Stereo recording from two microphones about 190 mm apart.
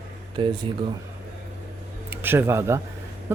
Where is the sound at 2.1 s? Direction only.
10° right (ahead or behind).